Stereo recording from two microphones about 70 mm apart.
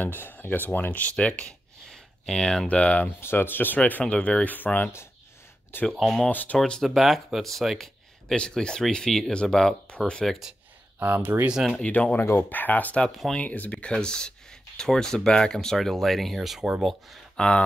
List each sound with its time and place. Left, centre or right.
0.0 s speech: left
1.1 s speech: centre
2.7 s speech: centre
3.1 s speech: left
4.0 s speech: centre
4.5 s speech: left
6.6 s speech: centre
11.0 s speech: right
11.4 s speech: centre
11.8 s speech: left
13.0 s speech: centre
13.4 s speech: centre
17.4 s speech: centre